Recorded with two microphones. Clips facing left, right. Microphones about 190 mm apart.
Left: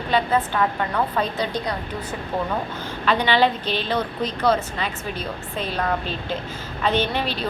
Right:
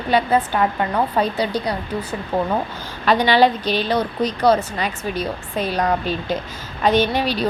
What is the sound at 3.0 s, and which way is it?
Speech, 40° right (ahead or behind).